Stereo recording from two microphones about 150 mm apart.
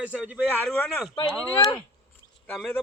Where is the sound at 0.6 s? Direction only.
10° left (ahead or behind).